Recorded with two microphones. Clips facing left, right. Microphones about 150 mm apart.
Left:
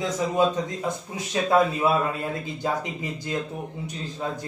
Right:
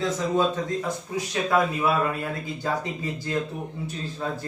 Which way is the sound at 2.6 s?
20° left (ahead or behind).